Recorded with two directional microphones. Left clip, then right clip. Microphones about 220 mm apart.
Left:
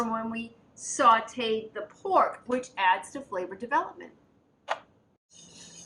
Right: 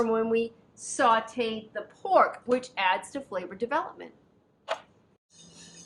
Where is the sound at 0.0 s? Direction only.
45° right (ahead or behind).